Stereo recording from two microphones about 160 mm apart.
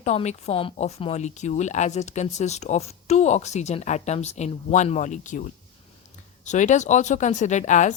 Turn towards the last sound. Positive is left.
turn(degrees=50)  # may be behind; listen again after turning